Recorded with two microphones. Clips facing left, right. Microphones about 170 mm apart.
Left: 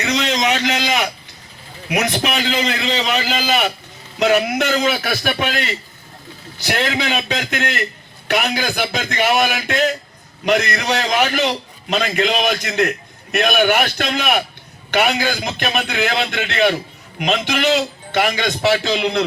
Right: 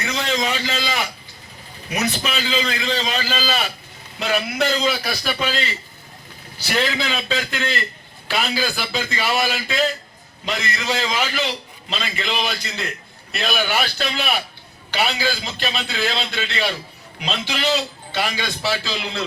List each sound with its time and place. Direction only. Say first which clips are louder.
0.0 s a sound: left 4 dB; 80° left
1.9 s a man's voice: left 4 dB; 70° left (ahead or behind)
17.2 s a man's voice: left 7 dB; 75° left (ahead or behind)